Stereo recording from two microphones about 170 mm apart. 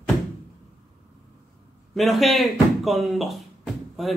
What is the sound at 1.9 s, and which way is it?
Speech, centre (ahead or behind).